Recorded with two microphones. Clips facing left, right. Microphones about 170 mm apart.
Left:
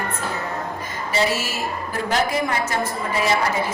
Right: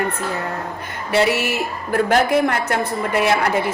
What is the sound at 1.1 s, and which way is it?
A woman's voice, 65° right (ahead or behind).